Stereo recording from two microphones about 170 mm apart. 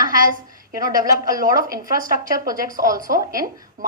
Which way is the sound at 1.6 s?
55° right (ahead or behind).